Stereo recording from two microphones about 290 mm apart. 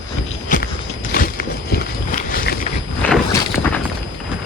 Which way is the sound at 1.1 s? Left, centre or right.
Left.